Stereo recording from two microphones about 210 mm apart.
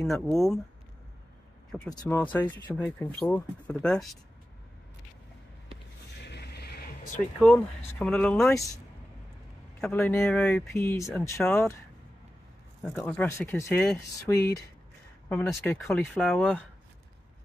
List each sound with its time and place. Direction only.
0.0 s speech: centre (ahead or behind)
1.9 s speech: 15° left (ahead or behind)
6.2 s a sound: 50° left (ahead or behind)
7.3 s speech: 5° left (ahead or behind)
9.8 s speech: 5° left (ahead or behind)
12.8 s speech: 5° left (ahead or behind)